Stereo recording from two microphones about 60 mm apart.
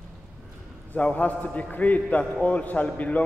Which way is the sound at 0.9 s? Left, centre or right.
Left.